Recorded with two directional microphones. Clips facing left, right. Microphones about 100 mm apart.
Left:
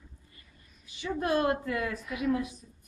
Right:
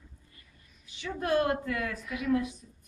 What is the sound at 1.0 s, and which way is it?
Speech, 10° left (ahead or behind).